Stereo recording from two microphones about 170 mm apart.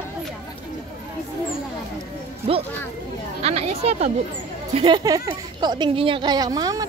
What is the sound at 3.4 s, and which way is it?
Speech, 40° right (ahead or behind).